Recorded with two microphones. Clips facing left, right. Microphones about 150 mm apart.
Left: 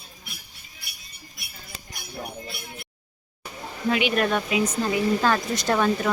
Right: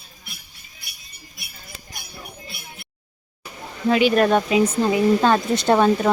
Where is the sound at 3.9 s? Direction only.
35° right (ahead or behind).